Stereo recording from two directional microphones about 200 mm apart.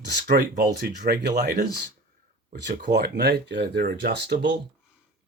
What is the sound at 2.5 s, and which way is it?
Speech, 60° right (ahead or behind).